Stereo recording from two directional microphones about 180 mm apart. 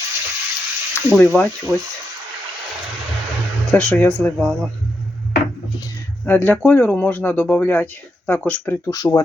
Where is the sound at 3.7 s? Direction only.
5° left (ahead or behind).